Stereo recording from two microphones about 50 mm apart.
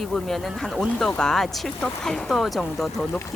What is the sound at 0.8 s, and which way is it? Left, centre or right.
Speech, centre.